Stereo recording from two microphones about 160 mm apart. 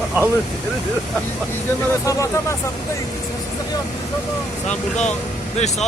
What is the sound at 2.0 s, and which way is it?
Speech, 20° left (ahead or behind).